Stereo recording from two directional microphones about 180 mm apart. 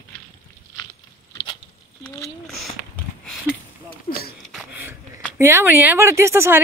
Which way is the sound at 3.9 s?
55° left (ahead or behind).